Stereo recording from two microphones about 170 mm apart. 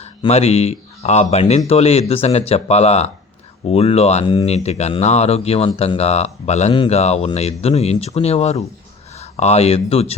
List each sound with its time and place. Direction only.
0.0 s speech: 40° left (ahead or behind)